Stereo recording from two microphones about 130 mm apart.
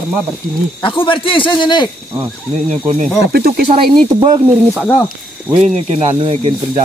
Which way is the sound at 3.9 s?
35° right (ahead or behind).